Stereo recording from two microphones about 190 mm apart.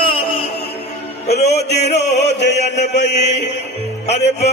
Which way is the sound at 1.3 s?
60° left (ahead or behind).